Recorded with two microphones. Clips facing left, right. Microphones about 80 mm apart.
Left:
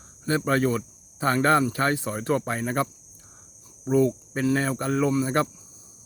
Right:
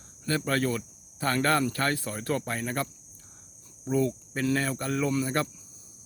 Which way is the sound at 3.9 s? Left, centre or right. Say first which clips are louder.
Left 5 dB; left.